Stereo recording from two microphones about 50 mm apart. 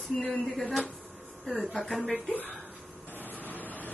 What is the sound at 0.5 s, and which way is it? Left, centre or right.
Speech, centre.